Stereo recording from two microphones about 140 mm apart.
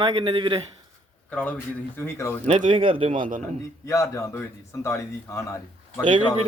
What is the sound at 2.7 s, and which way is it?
Speech, 40° right (ahead or behind).